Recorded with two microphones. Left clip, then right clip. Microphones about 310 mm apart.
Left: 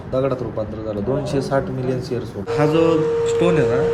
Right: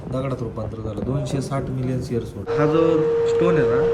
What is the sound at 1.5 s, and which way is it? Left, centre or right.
Speech, left.